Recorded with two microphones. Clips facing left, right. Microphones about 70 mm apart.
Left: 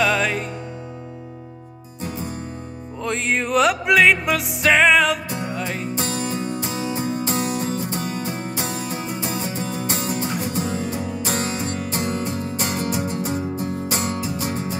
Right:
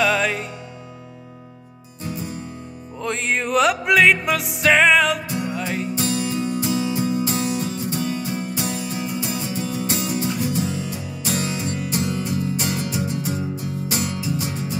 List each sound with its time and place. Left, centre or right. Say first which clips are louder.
0.0 s music: even; centre
2.0 s music: even; left
3.0 s music: left 1 dB; centre
5.9 s music: right 2 dB; left